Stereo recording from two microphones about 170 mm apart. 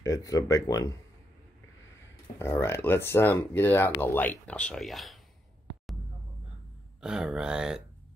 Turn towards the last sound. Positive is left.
turn(degrees=-5)  # may be behind; listen again after turning